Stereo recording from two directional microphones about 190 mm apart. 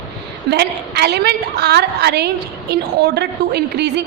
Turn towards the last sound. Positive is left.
turn(degrees=-60)  # may be behind; listen again after turning